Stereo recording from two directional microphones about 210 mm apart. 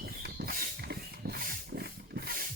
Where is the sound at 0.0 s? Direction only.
50° right (ahead or behind).